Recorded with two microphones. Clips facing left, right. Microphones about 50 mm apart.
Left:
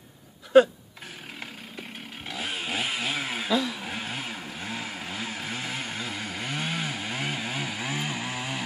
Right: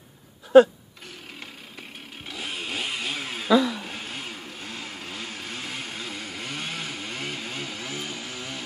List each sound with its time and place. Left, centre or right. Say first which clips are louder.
2.2 s chainsaw: left 1 dB; centre
7.9 s chainsaw: left 3 dB; left